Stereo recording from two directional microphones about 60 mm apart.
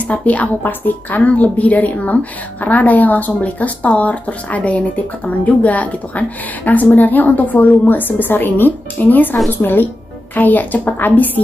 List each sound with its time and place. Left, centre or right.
0.0 s speech: left